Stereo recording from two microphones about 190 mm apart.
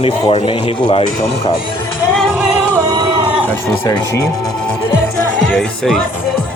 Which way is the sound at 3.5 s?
15° left (ahead or behind).